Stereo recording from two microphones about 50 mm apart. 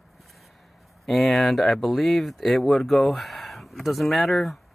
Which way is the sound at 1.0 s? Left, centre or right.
Centre.